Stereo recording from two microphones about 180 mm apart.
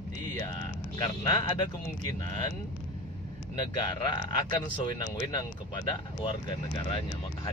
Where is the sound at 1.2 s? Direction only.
20° left (ahead or behind).